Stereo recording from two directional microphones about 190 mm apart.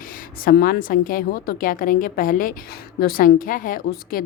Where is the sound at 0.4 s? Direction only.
50° left (ahead or behind).